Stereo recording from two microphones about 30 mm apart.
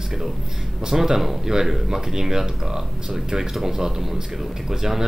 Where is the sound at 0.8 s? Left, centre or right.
Centre.